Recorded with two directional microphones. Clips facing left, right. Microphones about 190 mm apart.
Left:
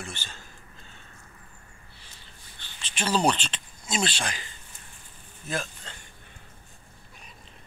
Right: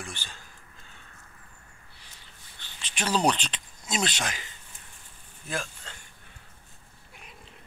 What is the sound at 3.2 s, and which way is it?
Speech, centre (ahead or behind).